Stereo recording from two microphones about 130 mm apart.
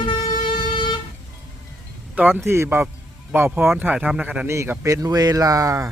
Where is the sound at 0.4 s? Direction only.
35° left (ahead or behind).